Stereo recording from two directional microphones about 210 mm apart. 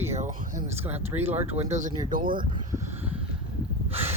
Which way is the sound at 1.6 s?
35° right (ahead or behind).